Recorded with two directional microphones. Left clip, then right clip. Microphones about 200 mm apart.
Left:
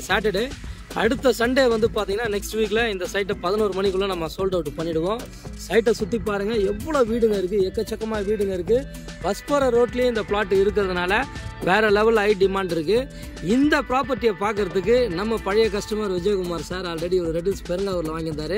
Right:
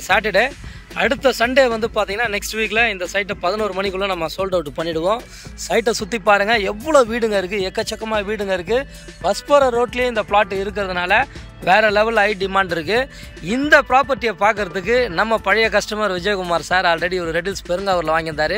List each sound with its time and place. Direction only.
0.1 s speech: centre (ahead or behind)